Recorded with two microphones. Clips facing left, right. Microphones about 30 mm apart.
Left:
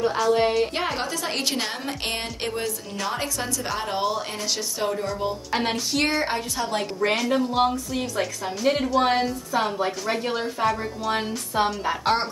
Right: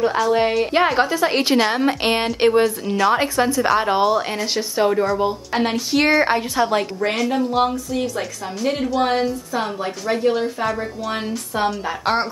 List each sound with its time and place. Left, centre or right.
0.3 s a woman's voice: centre
4.0 s a woman's voice: centre
4.6 s a woman's voice: right
5.5 s a woman's voice: centre; by 6.8 s right
7.0 s a woman's voice: centre